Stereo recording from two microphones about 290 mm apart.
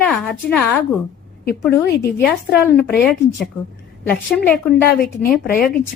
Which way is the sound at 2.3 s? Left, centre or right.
Centre.